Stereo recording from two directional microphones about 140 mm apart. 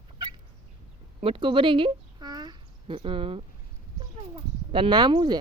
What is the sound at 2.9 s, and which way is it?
A child's voice, 40° right (ahead or behind).